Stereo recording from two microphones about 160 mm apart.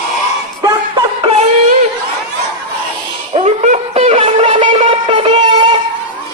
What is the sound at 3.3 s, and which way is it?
Shofar, 45° right (ahead or behind).